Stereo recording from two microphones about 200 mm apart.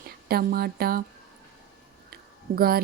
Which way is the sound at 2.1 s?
50° right (ahead or behind).